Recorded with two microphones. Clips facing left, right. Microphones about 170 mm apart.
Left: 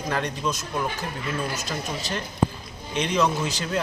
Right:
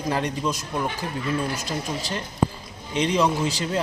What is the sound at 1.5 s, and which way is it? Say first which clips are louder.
Speech: right 2 dB; 30° right (ahead or behind).